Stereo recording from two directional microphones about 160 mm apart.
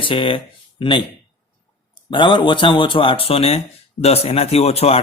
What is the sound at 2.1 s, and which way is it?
Speech, 30° left (ahead or behind).